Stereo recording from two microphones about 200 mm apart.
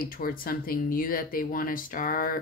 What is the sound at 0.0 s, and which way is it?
Speech, 45° left (ahead or behind).